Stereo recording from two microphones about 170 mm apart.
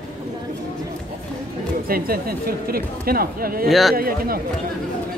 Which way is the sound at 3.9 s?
60° right (ahead or behind).